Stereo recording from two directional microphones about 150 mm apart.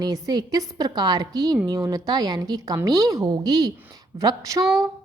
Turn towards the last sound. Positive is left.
turn(degrees=-25)  # may be behind; listen again after turning